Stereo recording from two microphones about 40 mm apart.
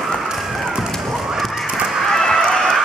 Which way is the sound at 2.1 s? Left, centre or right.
Centre.